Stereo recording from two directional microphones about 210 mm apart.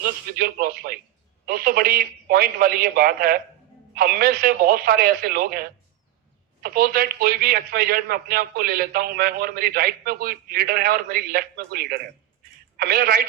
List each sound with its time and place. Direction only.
0.0 s a man's voice: 45° right (ahead or behind)